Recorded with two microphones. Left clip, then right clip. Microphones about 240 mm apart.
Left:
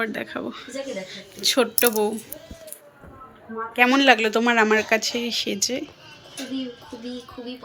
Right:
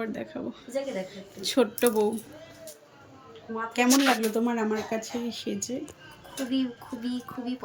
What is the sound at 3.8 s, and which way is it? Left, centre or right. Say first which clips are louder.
Speech: left 7 dB; centre.